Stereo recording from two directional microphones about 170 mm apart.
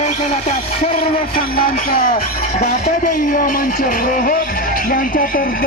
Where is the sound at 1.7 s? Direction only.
55° left (ahead or behind).